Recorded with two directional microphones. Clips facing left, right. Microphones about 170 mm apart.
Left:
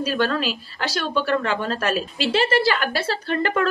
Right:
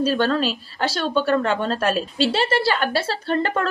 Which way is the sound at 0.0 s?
30° right (ahead or behind).